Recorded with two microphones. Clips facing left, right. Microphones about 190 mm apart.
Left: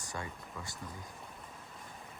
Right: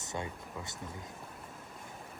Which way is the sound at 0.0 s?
20° right (ahead or behind).